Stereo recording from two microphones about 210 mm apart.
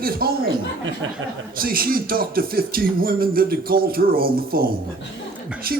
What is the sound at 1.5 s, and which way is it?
Speech, 45° right (ahead or behind).